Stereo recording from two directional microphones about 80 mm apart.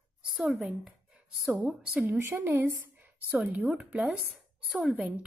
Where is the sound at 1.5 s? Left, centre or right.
Centre.